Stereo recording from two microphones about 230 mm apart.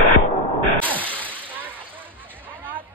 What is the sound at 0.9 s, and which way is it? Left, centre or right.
Whip, centre.